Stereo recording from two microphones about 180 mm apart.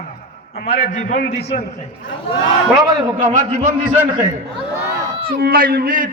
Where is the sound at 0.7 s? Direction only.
45° left (ahead or behind).